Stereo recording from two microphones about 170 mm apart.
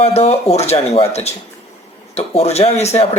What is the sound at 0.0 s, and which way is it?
Speech, 35° left (ahead or behind).